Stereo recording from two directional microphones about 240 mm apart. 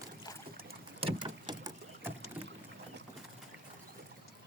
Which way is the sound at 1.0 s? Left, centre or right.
Right.